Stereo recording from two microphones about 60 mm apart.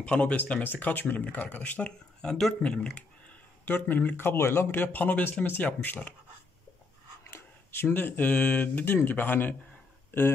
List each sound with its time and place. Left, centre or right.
0.0 s speech: centre
3.6 s speech: left
4.4 s speech: left
4.7 s speech: left
7.2 s speech: left